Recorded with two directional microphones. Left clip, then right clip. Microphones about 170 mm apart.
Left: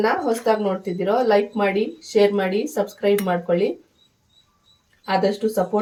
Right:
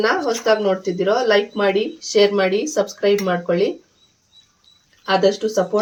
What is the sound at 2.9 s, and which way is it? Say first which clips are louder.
Speech: right 1 dB; 35° right (ahead or behind).